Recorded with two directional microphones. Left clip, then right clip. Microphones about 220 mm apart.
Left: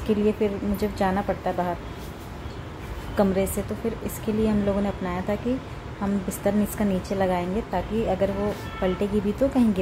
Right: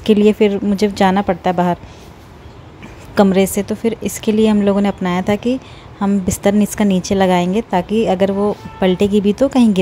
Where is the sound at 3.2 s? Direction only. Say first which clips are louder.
Right 10 dB; 45° right (ahead or behind).